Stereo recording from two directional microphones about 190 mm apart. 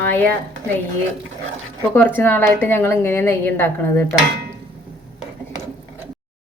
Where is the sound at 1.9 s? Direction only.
10° left (ahead or behind).